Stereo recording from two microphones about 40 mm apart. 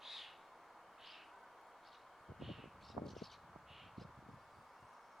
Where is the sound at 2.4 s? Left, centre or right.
Centre.